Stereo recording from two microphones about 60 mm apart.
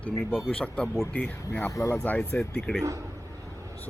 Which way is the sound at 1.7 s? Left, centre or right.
Left.